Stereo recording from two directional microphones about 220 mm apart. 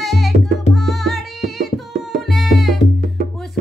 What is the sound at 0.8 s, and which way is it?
Tabla, centre (ahead or behind).